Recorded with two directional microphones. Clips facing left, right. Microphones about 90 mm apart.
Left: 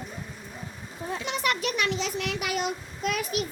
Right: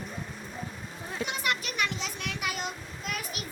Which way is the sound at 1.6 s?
90° left.